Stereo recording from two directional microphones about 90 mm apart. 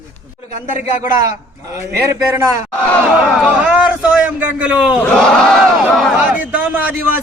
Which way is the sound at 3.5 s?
10° right (ahead or behind).